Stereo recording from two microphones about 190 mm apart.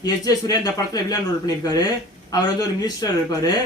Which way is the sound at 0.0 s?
20° left (ahead or behind).